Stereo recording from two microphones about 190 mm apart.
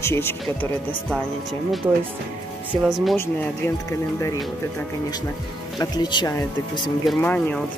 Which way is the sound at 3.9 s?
15° left (ahead or behind).